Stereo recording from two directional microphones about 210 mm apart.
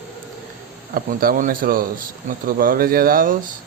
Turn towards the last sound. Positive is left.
turn(degrees=-40)  # may be behind; listen again after turning